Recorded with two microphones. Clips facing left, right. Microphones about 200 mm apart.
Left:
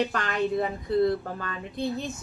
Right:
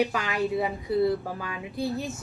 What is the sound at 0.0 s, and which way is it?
Speech, 5° right (ahead or behind).